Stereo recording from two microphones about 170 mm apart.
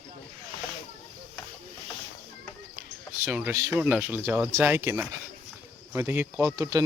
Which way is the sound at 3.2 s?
10° right (ahead or behind).